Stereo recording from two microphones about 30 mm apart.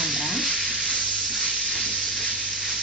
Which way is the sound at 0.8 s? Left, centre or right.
Left.